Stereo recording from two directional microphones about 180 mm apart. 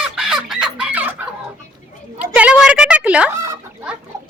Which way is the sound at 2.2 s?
5° right (ahead or behind).